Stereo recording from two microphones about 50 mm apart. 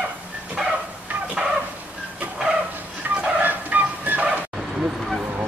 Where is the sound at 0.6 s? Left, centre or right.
Centre.